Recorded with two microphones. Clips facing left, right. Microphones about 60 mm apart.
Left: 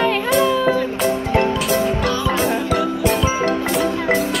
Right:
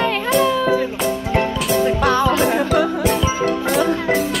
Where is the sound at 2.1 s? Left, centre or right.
Right.